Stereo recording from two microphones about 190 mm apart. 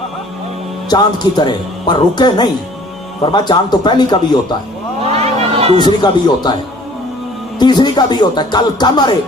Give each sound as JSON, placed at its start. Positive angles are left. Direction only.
{"t": 0.9, "sound": "speech", "side_deg": 20}
{"t": 5.0, "sound": "a sound", "side_deg": -35}
{"t": 5.8, "sound": "speech", "side_deg": 20}
{"t": 7.6, "sound": "speech", "side_deg": 25}